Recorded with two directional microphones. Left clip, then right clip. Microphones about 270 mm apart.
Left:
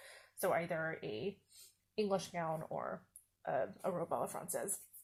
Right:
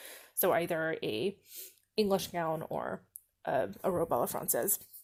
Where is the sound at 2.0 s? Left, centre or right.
Right.